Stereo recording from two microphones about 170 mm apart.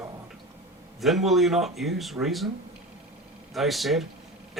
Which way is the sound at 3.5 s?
Centre (ahead or behind).